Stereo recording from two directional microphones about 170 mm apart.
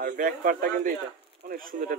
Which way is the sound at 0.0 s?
50° right (ahead or behind).